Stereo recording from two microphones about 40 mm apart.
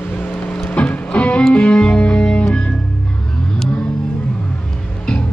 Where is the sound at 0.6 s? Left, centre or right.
Left.